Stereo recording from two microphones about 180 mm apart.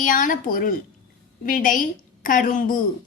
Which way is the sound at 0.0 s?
50° left (ahead or behind).